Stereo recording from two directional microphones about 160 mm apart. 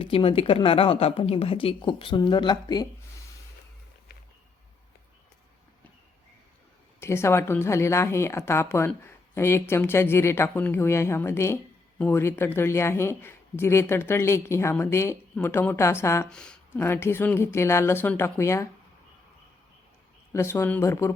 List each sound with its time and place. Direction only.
0.0 s a woman's voice: 35° left (ahead or behind)
7.0 s speech: 15° left (ahead or behind)
16.3 s speech: 5° left (ahead or behind)
20.3 s speech: 15° left (ahead or behind)